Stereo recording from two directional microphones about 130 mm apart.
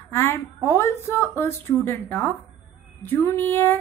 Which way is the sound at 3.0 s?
20° left (ahead or behind).